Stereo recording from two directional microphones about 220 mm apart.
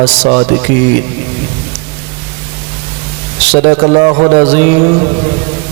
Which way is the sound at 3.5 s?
30° right (ahead or behind).